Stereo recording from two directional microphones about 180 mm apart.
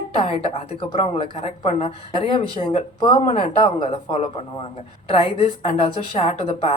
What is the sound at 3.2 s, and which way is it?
Speech, 35° left (ahead or behind).